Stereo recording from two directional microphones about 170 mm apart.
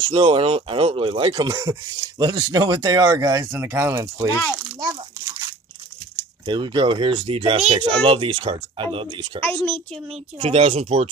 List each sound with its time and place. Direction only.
0.0 s speech: 30° right (ahead or behind)
4.3 s speech: 10° left (ahead or behind)
4.7 s crumpling: 25° right (ahead or behind)
6.4 s speech: 30° right (ahead or behind)
9.4 s speech: 10° left (ahead or behind)
10.4 s speech: 35° right (ahead or behind)